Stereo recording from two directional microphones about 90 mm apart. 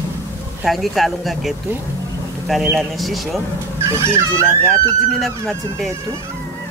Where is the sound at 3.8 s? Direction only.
30° right (ahead or behind).